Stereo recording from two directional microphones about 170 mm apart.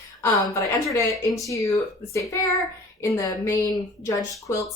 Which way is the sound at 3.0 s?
20° left (ahead or behind).